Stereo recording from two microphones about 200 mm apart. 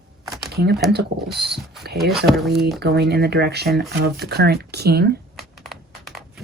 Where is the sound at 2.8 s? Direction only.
55° right (ahead or behind).